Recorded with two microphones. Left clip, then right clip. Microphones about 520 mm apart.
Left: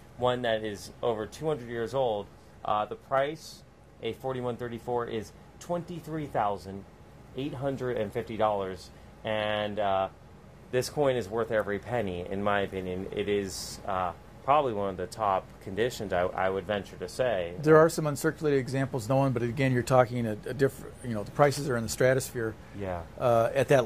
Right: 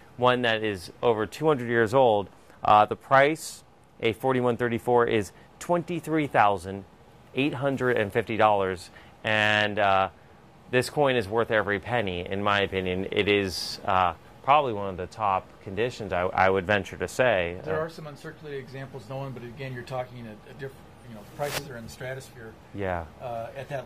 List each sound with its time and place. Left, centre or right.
0.2 s speech: right
16.3 s speech: right
17.7 s speech: left
21.9 s speech: centre
22.8 s speech: right
23.2 s speech: left